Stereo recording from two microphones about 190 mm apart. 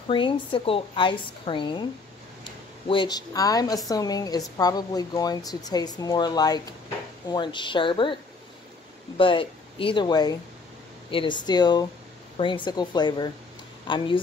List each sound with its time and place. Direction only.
0.1 s speech: 25° left (ahead or behind)
2.9 s speech: 25° left (ahead or behind)